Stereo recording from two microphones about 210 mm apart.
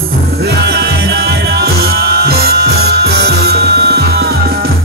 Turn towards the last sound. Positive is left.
turn(degrees=-50)  # may be behind; listen again after turning